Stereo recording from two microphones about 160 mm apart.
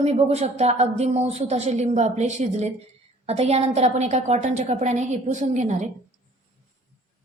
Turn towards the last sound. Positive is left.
turn(degrees=-45)  # may be behind; listen again after turning